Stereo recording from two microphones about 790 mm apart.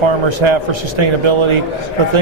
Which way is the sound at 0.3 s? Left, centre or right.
Right.